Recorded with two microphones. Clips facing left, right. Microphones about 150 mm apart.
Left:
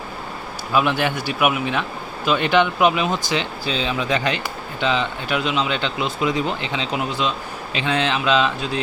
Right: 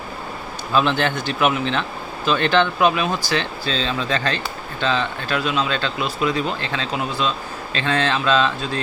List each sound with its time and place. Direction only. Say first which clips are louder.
0.7 s speech: even; 10° left (ahead or behind)